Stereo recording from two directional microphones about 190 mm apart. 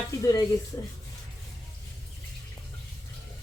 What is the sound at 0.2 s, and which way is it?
Speech, 20° left (ahead or behind).